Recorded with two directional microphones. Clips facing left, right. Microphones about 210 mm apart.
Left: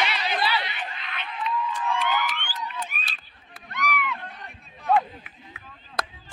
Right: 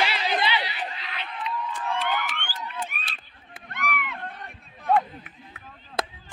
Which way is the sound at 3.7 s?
55° right (ahead or behind).